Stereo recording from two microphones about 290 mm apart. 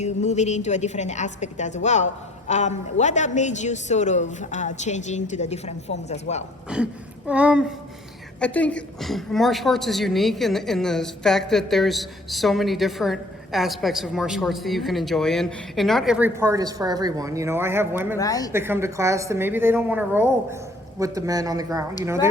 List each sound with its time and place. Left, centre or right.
0.0 s a woman's voice: left
7.3 s a woman's voice: centre
18.2 s a woman's voice: centre
18.5 s a woman's voice: centre